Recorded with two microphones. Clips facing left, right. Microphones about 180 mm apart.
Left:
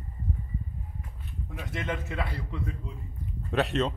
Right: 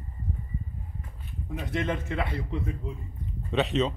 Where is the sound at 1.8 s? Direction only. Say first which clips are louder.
Right 2 dB; 25° right (ahead or behind).